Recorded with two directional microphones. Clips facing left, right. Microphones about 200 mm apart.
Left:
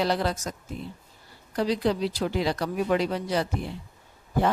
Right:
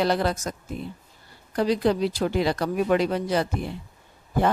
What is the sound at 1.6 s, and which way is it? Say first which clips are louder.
A woman's voice: right 3 dB; 55° right (ahead or behind).